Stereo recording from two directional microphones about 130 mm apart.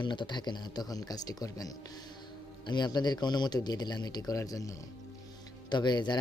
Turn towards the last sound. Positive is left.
turn(degrees=35)  # may be behind; listen again after turning